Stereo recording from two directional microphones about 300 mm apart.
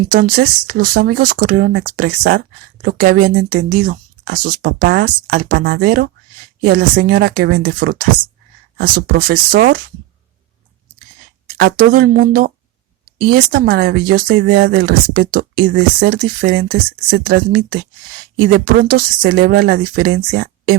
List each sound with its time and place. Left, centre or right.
0.1 s speech: right
11.5 s speech: right